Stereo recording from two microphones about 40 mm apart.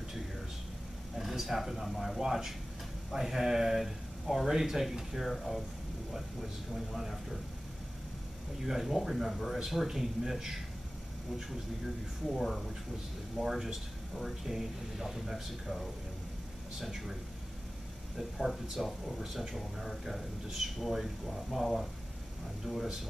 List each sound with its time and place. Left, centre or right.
1.1 s speech: centre
8.6 s speech: centre
12.4 s speech: centre
16.8 s speech: centre